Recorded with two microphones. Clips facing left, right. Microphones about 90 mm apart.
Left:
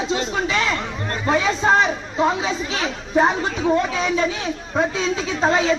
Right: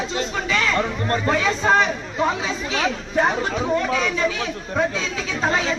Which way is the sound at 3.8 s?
20° left (ahead or behind).